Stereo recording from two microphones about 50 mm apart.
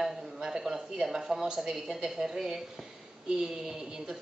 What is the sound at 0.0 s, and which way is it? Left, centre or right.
A woman's voice, centre.